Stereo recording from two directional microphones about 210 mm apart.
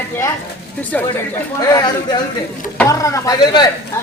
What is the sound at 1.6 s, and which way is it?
A man's voice, 20° left (ahead or behind).